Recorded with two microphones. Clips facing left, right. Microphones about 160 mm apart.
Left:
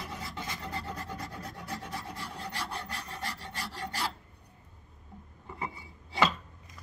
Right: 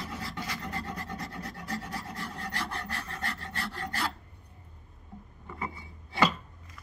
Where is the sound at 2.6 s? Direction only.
10° left (ahead or behind).